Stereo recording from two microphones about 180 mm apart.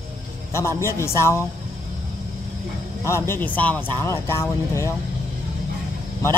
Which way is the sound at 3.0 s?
15° left (ahead or behind).